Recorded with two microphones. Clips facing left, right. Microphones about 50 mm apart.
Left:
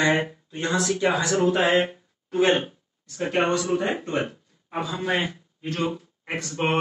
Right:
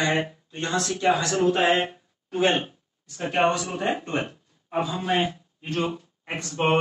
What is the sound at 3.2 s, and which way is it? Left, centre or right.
Speech, centre.